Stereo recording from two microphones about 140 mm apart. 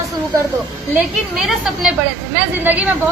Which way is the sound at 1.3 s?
Centre (ahead or behind).